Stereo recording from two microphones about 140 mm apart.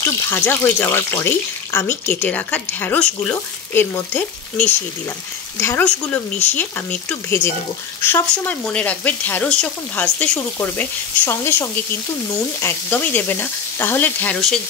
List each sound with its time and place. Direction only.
0.0 s speech: 15° left (ahead or behind)